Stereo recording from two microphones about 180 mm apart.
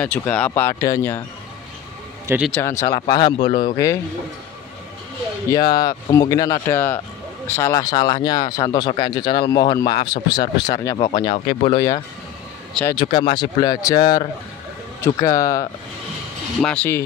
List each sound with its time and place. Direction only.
0.0 s speech: 5° left (ahead or behind)
2.2 s a man's voice: 10° right (ahead or behind)
2.5 s speech: 15° left (ahead or behind)
5.5 s speech: 20° left (ahead or behind)
11.3 s speech: 40° left (ahead or behind)
11.7 s speech: 20° left (ahead or behind)
16.6 s speech: 10° left (ahead or behind)